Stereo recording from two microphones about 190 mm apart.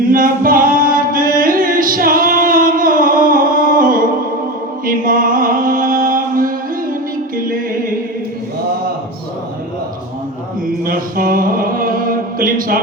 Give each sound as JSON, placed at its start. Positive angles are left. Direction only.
{"t": 0.0, "sound": "singing", "side_deg": -45}
{"t": 4.9, "sound": "music", "side_deg": -45}
{"t": 10.8, "sound": "mantra", "side_deg": -50}